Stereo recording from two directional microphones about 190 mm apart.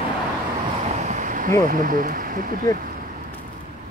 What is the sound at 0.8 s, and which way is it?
Waves, 35° right (ahead or behind).